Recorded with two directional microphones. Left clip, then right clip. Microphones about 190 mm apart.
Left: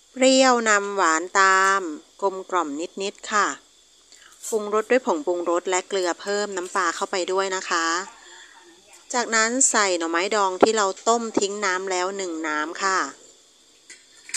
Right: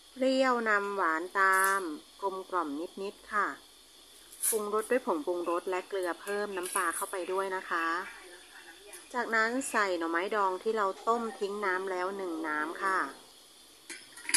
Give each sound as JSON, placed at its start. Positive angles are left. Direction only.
{"t": 0.2, "sound": "speech", "side_deg": 40}
{"t": 4.6, "sound": "a woman's voice", "side_deg": 40}
{"t": 9.1, "sound": "a woman's voice", "side_deg": 40}